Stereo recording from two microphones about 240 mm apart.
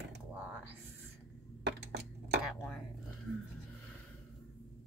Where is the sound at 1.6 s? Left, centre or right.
Right.